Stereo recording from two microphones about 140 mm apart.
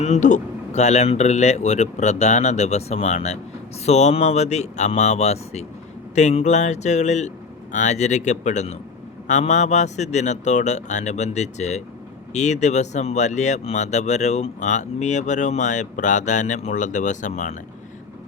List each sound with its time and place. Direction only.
0.0 s speech: 60° left (ahead or behind)